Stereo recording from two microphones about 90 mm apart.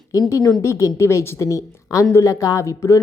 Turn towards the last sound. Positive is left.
turn(degrees=40)  # may be behind; listen again after turning